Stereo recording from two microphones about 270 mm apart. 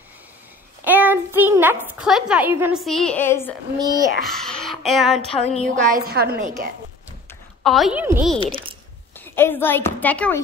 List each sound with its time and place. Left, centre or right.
0.8 s a child's voice: centre
3.8 s a child's voice: centre
4.2 s speech: centre
5.3 s a sound: left
6.0 s a woman's voice: right
7.2 s a woman's voice: centre
8.4 s a child's voice: centre
9.1 s a woman's voice: centre